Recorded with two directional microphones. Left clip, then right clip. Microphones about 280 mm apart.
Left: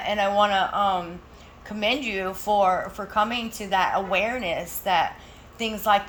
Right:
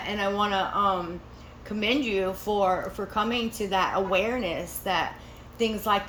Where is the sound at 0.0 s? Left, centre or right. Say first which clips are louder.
Left 6 dB; centre.